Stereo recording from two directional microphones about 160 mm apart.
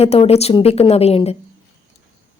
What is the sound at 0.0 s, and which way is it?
Speech, 40° left (ahead or behind).